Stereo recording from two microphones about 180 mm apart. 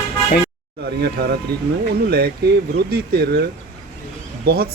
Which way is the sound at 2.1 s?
60° right (ahead or behind).